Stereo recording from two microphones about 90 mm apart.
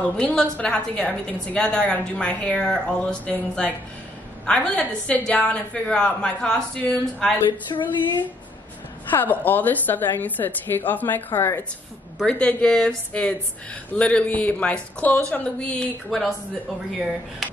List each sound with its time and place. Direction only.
0.2 s a woman's voice: 10° left (ahead or behind)
7.7 s speech: 55° left (ahead or behind)
9.1 s a woman's voice: 20° left (ahead or behind)
17.4 s speech: centre (ahead or behind)